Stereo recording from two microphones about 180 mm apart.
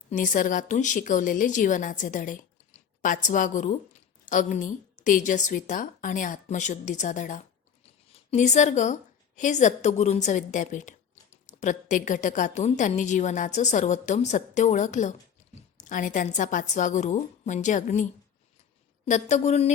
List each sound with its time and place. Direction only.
0.1 s a woman's voice: 45° left (ahead or behind)